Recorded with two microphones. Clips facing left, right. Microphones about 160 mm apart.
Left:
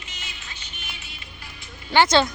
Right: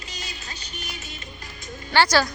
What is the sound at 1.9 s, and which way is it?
Speech, 20° left (ahead or behind).